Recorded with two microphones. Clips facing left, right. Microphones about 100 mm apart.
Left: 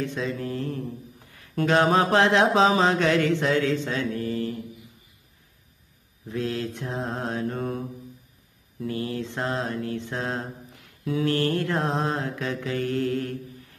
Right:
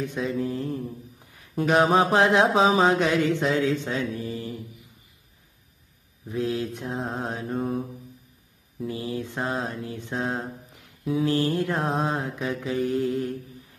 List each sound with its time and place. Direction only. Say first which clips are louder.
0.0 s mantra: right 2 dB; 20° right (ahead or behind)
3.3 s a man's voice: even; 20° right (ahead or behind)
4.2 s mantra: left 4 dB; 15° right (ahead or behind)
6.2 s mantra: right 1 dB; 15° right (ahead or behind)
7.5 s mantra: right 2 dB; centre (ahead or behind)
11.8 s mantra: even; 5° right (ahead or behind)